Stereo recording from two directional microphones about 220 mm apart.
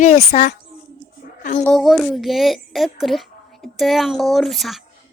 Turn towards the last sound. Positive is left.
turn(degrees=0)  # may be behind; listen again after turning